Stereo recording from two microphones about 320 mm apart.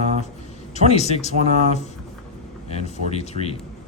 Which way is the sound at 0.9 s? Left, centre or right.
Centre.